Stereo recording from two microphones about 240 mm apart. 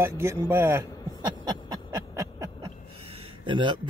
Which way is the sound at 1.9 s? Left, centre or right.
Centre.